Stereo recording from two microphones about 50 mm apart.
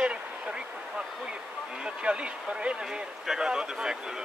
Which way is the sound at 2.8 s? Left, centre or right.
Centre.